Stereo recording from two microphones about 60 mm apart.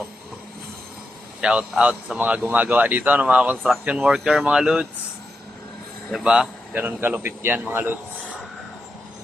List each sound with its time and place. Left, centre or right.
1.4 s speech: centre
6.2 s speech: centre
6.7 s speech: right